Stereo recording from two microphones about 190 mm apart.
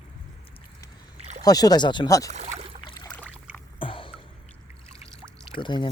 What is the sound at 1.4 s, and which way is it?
Speech, 20° left (ahead or behind).